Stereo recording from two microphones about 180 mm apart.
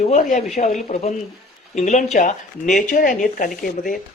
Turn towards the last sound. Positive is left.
turn(degrees=50)  # may be behind; listen again after turning